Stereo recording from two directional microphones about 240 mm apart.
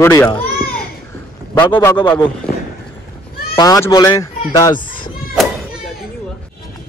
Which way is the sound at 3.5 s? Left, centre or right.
Centre.